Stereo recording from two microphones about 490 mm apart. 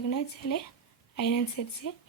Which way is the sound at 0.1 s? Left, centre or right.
Left.